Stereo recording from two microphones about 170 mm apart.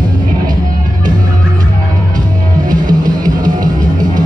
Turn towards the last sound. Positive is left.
turn(degrees=-25)  # may be behind; listen again after turning